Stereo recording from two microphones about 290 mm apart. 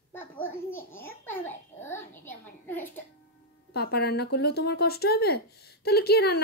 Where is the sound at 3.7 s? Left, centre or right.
Left.